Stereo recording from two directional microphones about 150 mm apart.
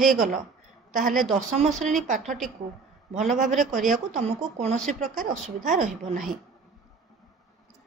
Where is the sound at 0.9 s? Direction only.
60° right (ahead or behind).